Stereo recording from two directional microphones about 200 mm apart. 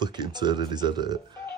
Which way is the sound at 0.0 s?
20° right (ahead or behind).